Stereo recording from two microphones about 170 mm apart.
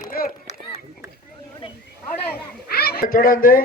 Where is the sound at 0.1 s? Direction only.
60° left (ahead or behind).